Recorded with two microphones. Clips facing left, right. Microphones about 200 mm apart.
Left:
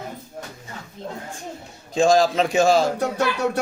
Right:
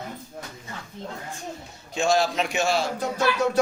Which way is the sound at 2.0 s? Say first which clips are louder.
Left 5 dB; 90° left.